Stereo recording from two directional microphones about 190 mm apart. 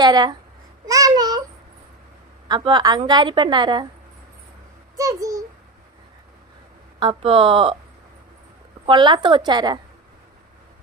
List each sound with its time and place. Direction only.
0.0 s a woman's voice: 20° right (ahead or behind)
0.9 s a sound: 20° right (ahead or behind)
2.5 s a woman's voice: 25° right (ahead or behind)
4.9 s a child's voice: 15° right (ahead or behind)
7.0 s a woman's voice: 25° right (ahead or behind)
8.9 s a woman's voice: 25° right (ahead or behind)